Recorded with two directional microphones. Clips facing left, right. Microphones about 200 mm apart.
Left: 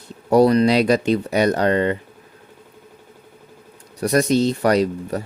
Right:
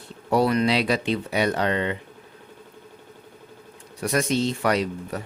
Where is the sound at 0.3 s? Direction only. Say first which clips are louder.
Left 6 dB; 40° left (ahead or behind).